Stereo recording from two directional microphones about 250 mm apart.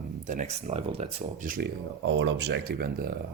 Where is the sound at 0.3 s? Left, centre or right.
Right.